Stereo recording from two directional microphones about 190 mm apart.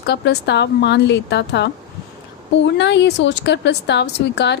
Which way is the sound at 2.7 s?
65° left (ahead or behind).